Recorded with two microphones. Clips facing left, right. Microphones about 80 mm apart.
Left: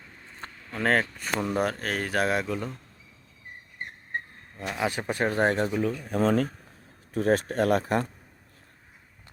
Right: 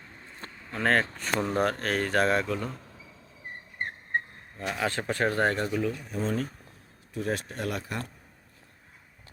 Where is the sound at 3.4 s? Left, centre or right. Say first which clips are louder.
Right 4 dB; right.